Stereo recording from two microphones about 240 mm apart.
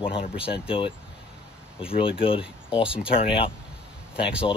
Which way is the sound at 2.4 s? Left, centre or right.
Centre.